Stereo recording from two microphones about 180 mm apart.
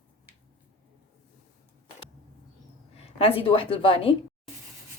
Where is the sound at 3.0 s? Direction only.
30° left (ahead or behind).